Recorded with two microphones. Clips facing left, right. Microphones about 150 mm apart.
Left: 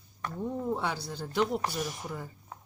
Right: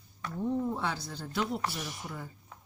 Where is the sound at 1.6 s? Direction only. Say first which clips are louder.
Left 3 dB; 40° left (ahead or behind).